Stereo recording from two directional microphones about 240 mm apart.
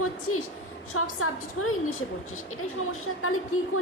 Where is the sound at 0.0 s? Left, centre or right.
Left.